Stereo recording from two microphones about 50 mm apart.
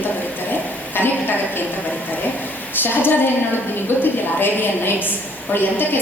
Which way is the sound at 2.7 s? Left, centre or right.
Left.